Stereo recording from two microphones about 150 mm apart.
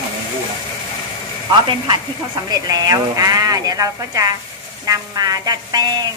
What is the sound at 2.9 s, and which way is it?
A woman's voice, 25° right (ahead or behind).